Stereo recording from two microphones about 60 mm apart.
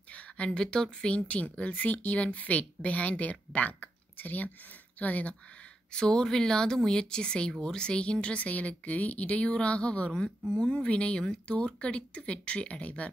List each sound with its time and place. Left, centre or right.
0.1 s speech: centre
5.9 s speech: centre